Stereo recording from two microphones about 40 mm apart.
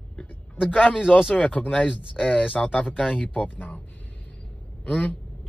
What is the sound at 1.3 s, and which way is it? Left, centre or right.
Speech, left.